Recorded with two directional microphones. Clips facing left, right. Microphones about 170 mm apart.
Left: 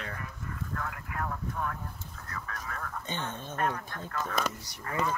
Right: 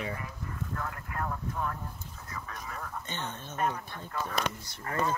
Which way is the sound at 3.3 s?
10° left (ahead or behind).